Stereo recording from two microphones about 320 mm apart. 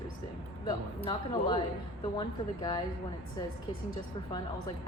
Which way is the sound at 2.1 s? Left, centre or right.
Centre.